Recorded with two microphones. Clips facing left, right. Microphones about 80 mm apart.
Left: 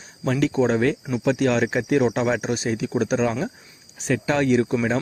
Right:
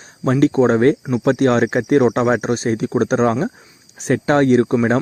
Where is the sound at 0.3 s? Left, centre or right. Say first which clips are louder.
Right 6 dB; right.